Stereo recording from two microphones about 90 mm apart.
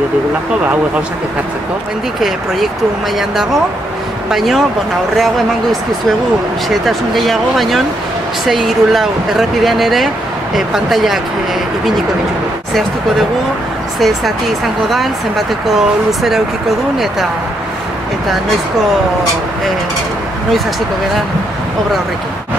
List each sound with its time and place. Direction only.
2.1 s speech: 5° right (ahead or behind)
13.9 s speech: centre (ahead or behind)